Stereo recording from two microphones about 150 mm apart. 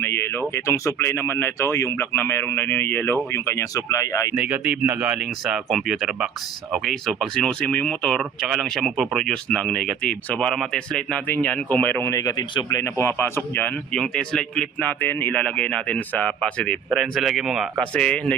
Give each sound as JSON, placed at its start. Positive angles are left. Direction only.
{"t": 0.0, "sound": "speech", "side_deg": 15}
{"t": 4.4, "sound": "speech", "side_deg": -10}
{"t": 16.9, "sound": "speech", "side_deg": 0}
{"t": 17.9, "sound": "speech", "side_deg": 5}